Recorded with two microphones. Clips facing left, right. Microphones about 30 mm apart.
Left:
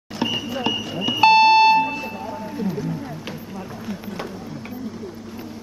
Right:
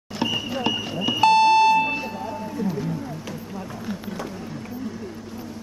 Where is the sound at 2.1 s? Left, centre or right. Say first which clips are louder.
Even; centre.